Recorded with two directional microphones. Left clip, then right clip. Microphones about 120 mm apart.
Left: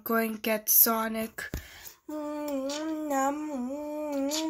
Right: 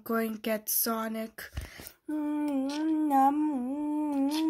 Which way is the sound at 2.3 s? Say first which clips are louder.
Even; 35° right (ahead or behind).